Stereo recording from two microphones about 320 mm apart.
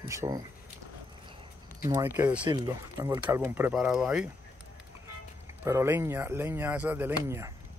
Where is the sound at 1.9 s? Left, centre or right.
Centre.